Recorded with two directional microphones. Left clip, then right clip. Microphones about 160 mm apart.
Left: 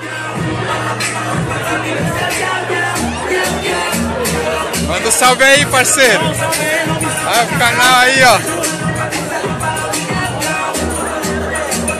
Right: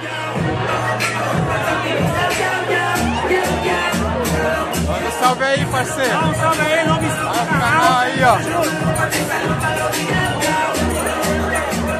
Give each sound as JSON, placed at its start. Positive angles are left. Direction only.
{"t": 5.2, "sound": "speech", "side_deg": 15}
{"t": 7.6, "sound": "speech", "side_deg": 15}